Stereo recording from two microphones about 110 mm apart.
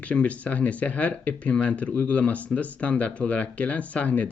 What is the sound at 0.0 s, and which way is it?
Speech, 10° left (ahead or behind).